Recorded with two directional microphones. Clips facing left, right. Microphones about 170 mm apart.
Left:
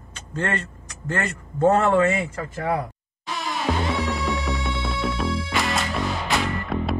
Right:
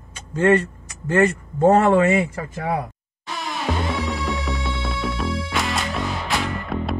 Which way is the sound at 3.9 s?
Centre (ahead or behind).